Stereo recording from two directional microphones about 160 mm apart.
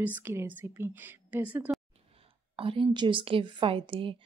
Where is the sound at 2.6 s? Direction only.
35° right (ahead or behind).